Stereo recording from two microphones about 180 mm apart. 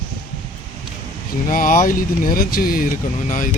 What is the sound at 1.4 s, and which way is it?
Speech, 50° left (ahead or behind).